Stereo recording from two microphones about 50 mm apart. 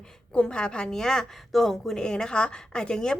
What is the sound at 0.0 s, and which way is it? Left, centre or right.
Speech, centre.